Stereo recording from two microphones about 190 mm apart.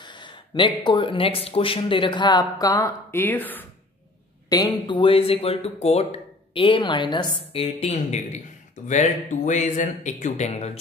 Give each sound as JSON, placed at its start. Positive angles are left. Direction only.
{"t": 0.0, "sound": "speech", "side_deg": 25}
{"t": 4.5, "sound": "speech", "side_deg": 20}